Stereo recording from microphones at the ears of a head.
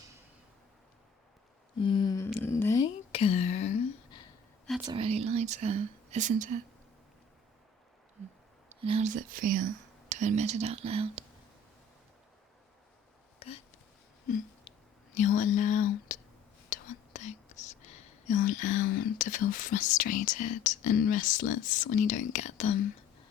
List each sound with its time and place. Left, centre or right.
1.8 s speech: left
2.8 s a sound: left
4.8 s speech: right
8.7 s speech: right
15.1 s speech: left